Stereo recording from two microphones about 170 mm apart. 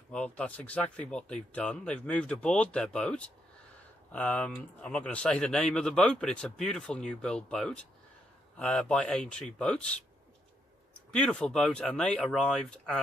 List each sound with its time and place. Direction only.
0.1 s speech: 5° left (ahead or behind)
11.1 s speech: 5° left (ahead or behind)